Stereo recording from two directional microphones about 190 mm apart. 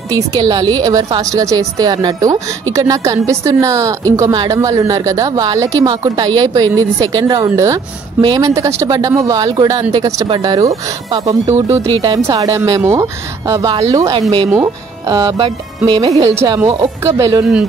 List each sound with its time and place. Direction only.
0.1 s a woman's voice: 20° right (ahead or behind)